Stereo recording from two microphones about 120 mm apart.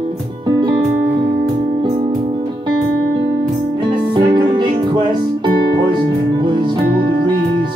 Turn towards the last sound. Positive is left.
turn(degrees=-40)  # may be behind; listen again after turning